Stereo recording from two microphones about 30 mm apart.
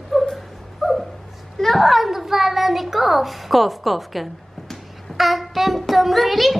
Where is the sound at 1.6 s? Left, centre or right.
Centre.